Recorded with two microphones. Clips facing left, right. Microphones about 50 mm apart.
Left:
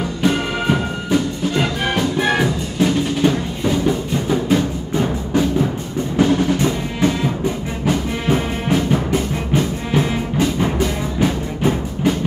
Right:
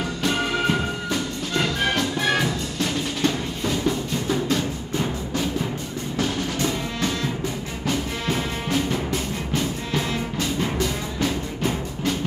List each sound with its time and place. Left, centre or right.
0.2 s music: centre